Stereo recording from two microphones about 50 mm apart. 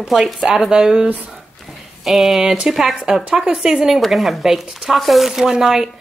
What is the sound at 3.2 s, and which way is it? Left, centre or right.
Speech, right.